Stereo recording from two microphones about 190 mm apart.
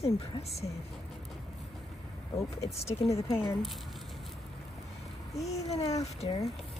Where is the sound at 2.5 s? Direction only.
30° left (ahead or behind).